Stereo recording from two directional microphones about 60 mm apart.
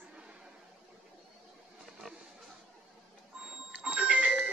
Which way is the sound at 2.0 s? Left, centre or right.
Centre.